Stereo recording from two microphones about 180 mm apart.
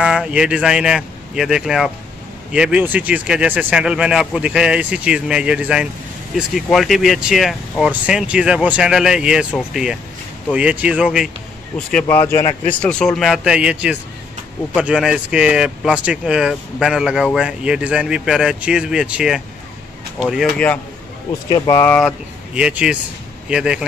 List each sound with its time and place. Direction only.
0.0 s speech: 5° right (ahead or behind)
10.5 s speech: 5° right (ahead or behind)
11.9 s speech: 10° left (ahead or behind)
21.5 s speech: 20° left (ahead or behind)
21.8 s speech: 5° left (ahead or behind)
22.5 s speech: 5° right (ahead or behind)